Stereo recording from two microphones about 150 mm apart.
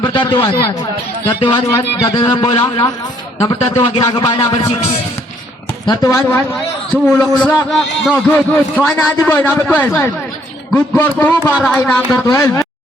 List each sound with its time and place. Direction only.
0.0 s a man's voice: 30° left (ahead or behind)
2.6 s a man's voice: 25° left (ahead or behind)
3.9 s speech: 35° left (ahead or behind)
4.2 s a man's voice: 25° left (ahead or behind)
5.8 s a man's voice: 25° left (ahead or behind)
6.9 s a man's voice: 10° left (ahead or behind)
8.3 s a man's voice: 10° left (ahead or behind)